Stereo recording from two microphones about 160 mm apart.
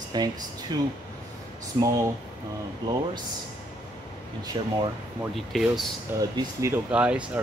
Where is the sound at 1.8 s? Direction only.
20° right (ahead or behind).